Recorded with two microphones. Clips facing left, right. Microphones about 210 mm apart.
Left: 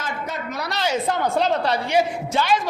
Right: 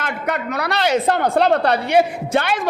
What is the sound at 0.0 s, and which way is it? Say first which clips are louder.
Speech: right 5 dB; 65° right (ahead or behind).